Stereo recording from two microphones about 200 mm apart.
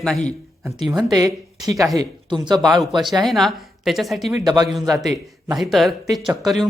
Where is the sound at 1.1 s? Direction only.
20° right (ahead or behind).